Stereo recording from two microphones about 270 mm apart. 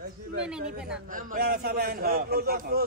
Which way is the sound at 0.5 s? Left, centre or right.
Centre.